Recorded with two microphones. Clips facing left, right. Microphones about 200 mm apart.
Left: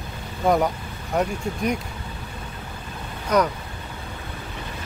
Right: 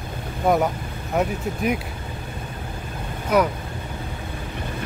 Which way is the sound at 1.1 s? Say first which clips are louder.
Right 1 dB; 5° right (ahead or behind).